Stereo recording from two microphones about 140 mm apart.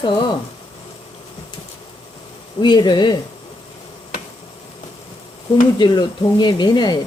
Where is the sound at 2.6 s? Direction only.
35° left (ahead or behind).